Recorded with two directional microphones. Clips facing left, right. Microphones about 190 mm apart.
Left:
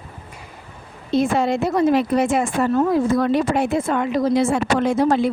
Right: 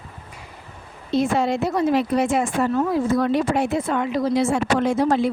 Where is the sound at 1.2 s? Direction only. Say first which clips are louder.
Left 1 dB; 55° left (ahead or behind).